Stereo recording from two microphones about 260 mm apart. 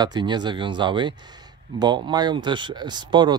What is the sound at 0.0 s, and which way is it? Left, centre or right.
Speech, centre.